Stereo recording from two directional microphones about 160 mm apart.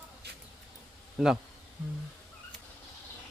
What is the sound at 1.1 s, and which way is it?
Speech, 5° right (ahead or behind).